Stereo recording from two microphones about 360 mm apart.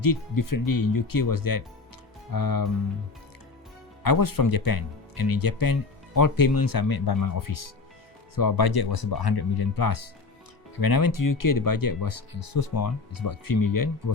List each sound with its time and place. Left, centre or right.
0.0 s speech: left
4.0 s speech: left
8.4 s speech: left